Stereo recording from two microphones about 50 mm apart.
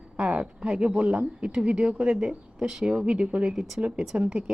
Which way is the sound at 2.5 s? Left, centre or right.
Centre.